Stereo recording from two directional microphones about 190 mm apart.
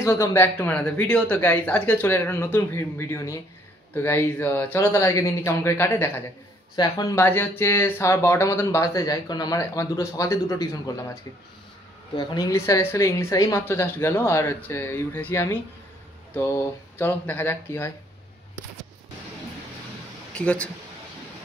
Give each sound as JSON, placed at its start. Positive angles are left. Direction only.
{"t": 0.0, "sound": "speech", "side_deg": 15}
{"t": 12.2, "sound": "speech", "side_deg": 20}
{"t": 20.3, "sound": "speech", "side_deg": 5}